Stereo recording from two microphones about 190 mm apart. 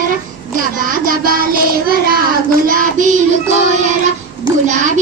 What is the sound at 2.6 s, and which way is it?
Music, 45° right (ahead or behind).